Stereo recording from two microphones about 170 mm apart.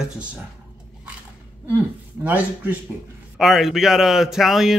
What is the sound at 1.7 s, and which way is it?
A man's voice, 10° right (ahead or behind).